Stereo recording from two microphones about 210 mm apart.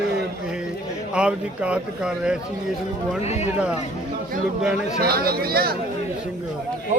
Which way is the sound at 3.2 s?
30° left (ahead or behind).